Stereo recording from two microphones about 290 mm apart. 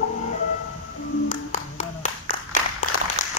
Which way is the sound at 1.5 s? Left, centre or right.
Left.